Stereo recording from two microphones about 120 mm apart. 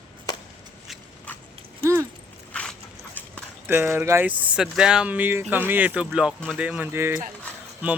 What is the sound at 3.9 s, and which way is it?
Speech, 20° right (ahead or behind).